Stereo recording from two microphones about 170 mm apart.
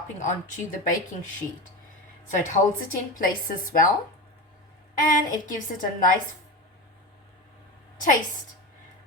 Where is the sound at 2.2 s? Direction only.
50° left (ahead or behind).